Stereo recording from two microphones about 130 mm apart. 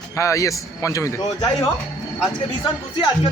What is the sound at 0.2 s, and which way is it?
Speech, 25° left (ahead or behind).